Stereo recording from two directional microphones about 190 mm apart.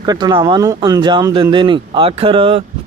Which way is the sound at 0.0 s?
20° right (ahead or behind).